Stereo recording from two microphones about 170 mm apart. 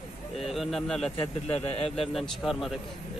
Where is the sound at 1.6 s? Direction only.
35° left (ahead or behind).